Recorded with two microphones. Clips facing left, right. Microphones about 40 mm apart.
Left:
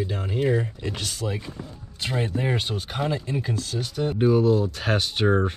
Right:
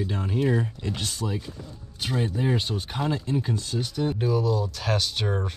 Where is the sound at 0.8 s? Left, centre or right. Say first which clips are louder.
Left 1 dB; left.